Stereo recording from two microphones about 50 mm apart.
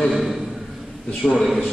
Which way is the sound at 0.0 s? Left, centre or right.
Centre.